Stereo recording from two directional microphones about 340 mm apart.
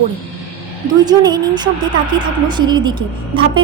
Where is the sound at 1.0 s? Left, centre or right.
Centre.